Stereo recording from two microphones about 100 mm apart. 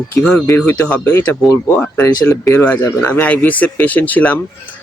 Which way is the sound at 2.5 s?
15° left (ahead or behind).